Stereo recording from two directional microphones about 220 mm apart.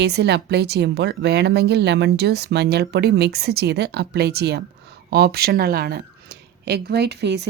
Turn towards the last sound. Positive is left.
turn(degrees=-50)  # may be behind; listen again after turning